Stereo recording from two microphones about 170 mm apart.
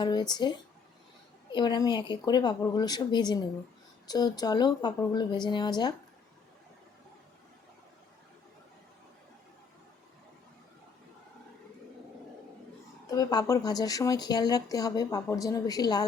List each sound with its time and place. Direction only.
0.0 s speech: 25° left (ahead or behind)
13.1 s speech: 20° left (ahead or behind)